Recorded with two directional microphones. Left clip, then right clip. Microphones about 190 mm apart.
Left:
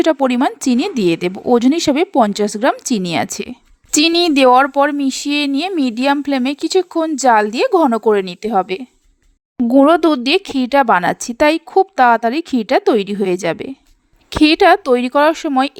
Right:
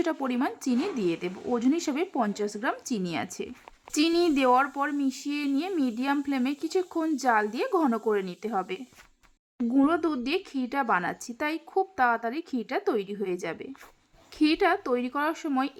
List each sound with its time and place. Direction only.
0.0 s speech: 40° left (ahead or behind)